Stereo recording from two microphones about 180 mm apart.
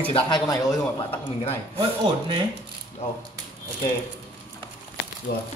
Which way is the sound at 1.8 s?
25° right (ahead or behind).